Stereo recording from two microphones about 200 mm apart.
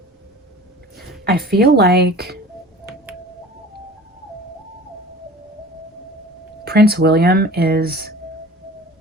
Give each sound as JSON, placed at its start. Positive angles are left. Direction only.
{"t": 1.2, "sound": "speech", "side_deg": -50}
{"t": 6.7, "sound": "speech", "side_deg": -50}